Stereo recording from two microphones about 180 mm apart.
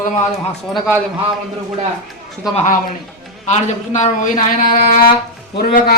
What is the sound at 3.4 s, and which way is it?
A man's voice, 40° left (ahead or behind).